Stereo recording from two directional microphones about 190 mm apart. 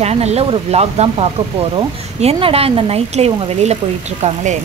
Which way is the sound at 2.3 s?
30° right (ahead or behind).